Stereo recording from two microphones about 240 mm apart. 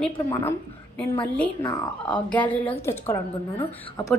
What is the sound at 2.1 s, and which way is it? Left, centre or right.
Speech, centre.